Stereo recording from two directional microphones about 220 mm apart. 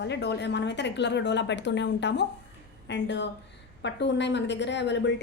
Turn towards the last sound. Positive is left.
turn(degrees=50)  # may be behind; listen again after turning